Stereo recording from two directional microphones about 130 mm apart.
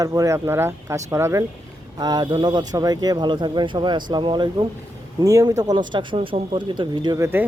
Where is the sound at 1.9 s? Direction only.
30° right (ahead or behind).